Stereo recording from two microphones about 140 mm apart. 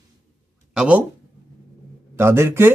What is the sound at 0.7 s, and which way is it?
Speech, 5° right (ahead or behind).